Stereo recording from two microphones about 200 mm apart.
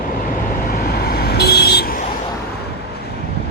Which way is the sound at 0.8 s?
50° left (ahead or behind).